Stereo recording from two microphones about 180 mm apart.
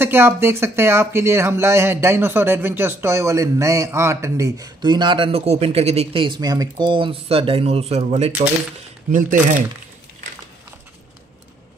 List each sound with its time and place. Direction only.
0.0 s speech: 15° right (ahead or behind); by 8.3 s 35° right (ahead or behind)
9.1 s speech: 45° right (ahead or behind)